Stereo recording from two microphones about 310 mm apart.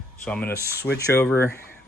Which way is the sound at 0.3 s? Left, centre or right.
Centre.